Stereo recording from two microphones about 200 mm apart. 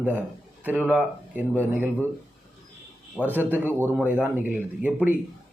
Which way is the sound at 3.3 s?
10° right (ahead or behind).